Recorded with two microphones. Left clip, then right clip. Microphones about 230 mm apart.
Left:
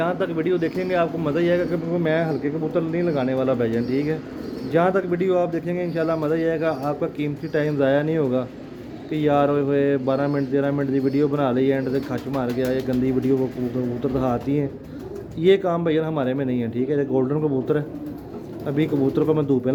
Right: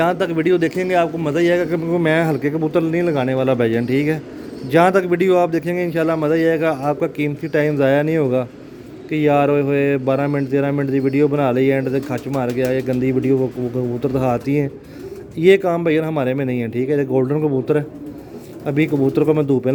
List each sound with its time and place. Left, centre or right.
0.0 s a man's voice: right